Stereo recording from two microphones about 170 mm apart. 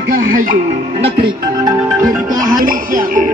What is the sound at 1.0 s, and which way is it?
Music, 25° right (ahead or behind).